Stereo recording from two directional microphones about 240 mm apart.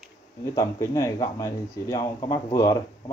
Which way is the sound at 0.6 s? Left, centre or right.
Centre.